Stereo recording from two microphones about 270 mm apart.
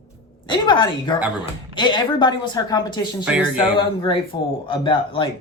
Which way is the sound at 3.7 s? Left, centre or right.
Centre.